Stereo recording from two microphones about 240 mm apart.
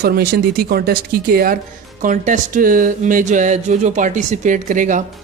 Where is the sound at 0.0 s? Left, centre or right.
Right.